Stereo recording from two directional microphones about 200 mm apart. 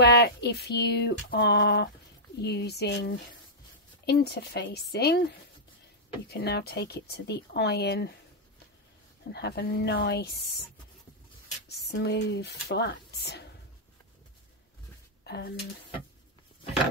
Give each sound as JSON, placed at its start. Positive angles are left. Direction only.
{"t": 0.0, "sound": "speech", "side_deg": 55}
{"t": 9.3, "sound": "speech", "side_deg": 55}
{"t": 11.7, "sound": "speech", "side_deg": 55}
{"t": 15.2, "sound": "speech", "side_deg": 55}